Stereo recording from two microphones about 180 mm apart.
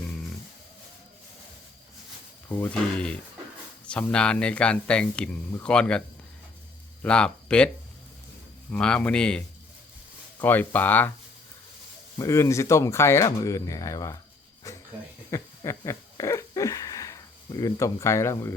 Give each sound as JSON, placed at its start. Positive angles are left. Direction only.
{"t": 2.5, "sound": "speech", "side_deg": 10}
{"t": 7.0, "sound": "speech", "side_deg": 5}
{"t": 8.7, "sound": "speech", "side_deg": 5}
{"t": 10.4, "sound": "speech", "side_deg": 10}
{"t": 12.2, "sound": "speech", "side_deg": 15}
{"t": 14.7, "sound": "a sound", "side_deg": 15}
{"t": 17.6, "sound": "speech", "side_deg": 20}